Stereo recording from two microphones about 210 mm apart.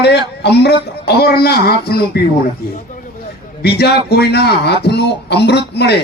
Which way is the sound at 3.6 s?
50° left (ahead or behind).